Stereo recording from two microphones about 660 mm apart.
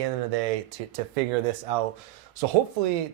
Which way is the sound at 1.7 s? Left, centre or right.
Right.